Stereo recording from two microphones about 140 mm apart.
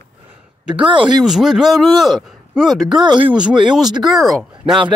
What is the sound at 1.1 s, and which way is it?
A man's voice, centre (ahead or behind).